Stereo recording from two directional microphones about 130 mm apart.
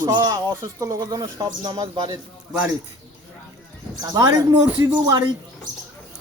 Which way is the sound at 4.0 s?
30° right (ahead or behind).